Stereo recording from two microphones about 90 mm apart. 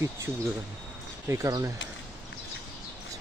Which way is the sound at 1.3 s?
35° right (ahead or behind).